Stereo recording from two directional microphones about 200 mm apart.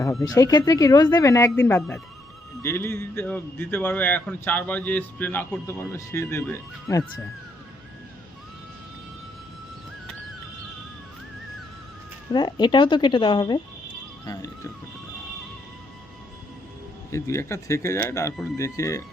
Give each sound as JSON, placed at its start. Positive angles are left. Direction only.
{"t": 0.0, "sound": "speech", "side_deg": 15}
{"t": 12.3, "sound": "speech", "side_deg": 20}
{"t": 17.1, "sound": "speech", "side_deg": 15}